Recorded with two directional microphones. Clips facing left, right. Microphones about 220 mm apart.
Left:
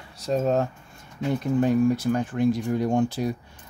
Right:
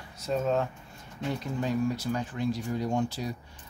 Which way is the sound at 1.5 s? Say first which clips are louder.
Left 9 dB; 50° left (ahead or behind).